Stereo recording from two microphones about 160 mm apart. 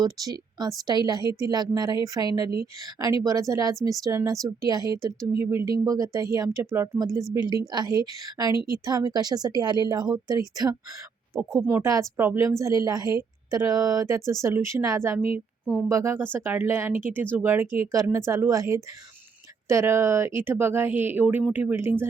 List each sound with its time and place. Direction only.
0.0 s speech: 25° right (ahead or behind)
11.5 s speech: 5° right (ahead or behind)
11.8 s speech: 20° right (ahead or behind)